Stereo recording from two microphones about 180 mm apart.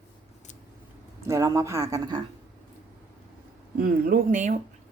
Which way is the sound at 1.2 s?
15° right (ahead or behind).